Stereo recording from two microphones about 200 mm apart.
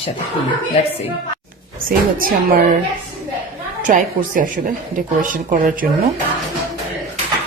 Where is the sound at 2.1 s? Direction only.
50° right (ahead or behind).